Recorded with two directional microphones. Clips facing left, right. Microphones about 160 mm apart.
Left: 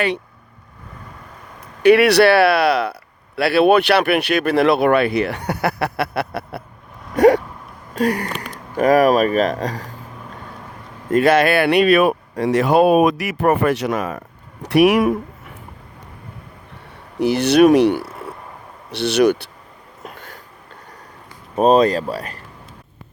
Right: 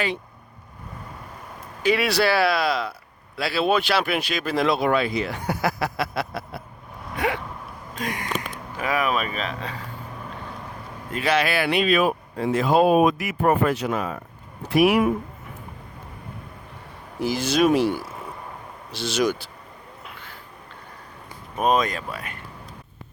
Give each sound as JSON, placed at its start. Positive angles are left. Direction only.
{"t": 1.8, "sound": "speech", "side_deg": 65}
{"t": 7.2, "sound": "a sound", "side_deg": 40}
{"t": 7.9, "sound": "speech", "side_deg": 40}
{"t": 11.1, "sound": "speech", "side_deg": 50}
{"t": 17.2, "sound": "speech", "side_deg": 65}
{"t": 20.0, "sound": "a sound", "side_deg": 45}
{"t": 21.5, "sound": "speech", "side_deg": 35}